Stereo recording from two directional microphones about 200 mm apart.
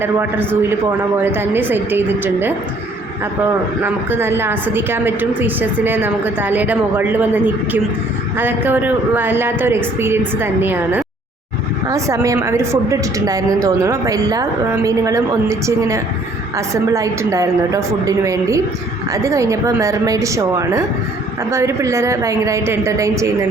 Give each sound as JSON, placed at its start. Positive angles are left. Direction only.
{"t": 0.0, "sound": "a woman's voice", "side_deg": -10}
{"t": 3.8, "sound": "a woman's voice", "side_deg": -10}
{"t": 8.4, "sound": "a woman's voice", "side_deg": -10}